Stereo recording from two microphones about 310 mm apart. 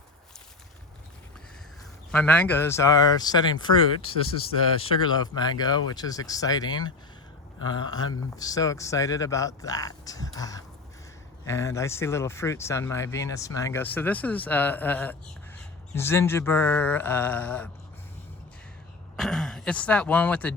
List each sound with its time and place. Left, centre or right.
2.1 s speech: centre
5.0 s speech: centre
19.1 s speech: centre